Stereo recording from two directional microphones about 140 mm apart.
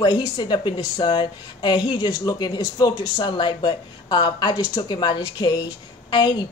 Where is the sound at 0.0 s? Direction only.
25° left (ahead or behind).